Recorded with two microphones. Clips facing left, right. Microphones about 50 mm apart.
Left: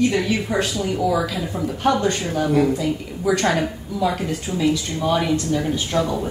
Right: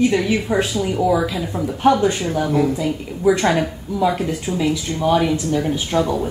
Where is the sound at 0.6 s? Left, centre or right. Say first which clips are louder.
Right 2 dB; centre.